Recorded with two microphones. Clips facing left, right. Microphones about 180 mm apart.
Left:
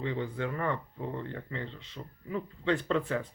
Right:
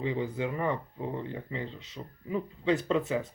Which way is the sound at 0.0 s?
10° right (ahead or behind).